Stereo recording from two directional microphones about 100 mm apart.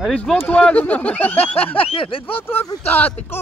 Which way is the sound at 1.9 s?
65° left (ahead or behind).